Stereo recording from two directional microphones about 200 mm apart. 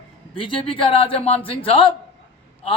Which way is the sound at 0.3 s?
25° left (ahead or behind).